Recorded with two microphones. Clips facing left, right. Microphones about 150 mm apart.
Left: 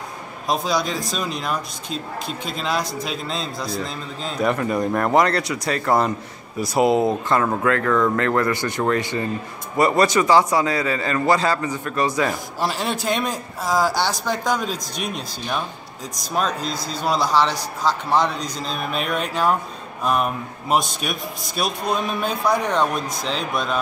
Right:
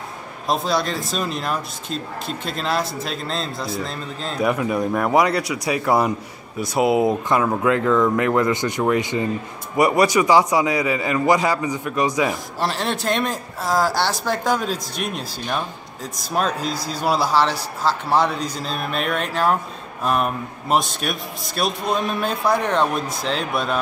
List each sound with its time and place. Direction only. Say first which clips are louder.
0.5 s a man's voice: right 1 dB; centre (ahead or behind)
12.5 s a man's voice: even; centre (ahead or behind)